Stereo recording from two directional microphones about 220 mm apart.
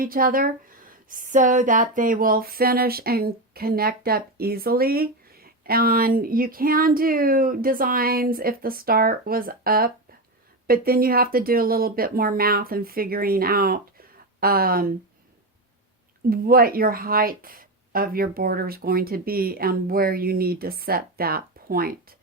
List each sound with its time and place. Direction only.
0.0 s speech: 40° right (ahead or behind)
16.3 s speech: 40° right (ahead or behind)